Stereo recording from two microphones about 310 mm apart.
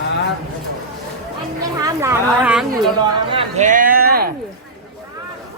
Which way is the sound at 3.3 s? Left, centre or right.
Centre.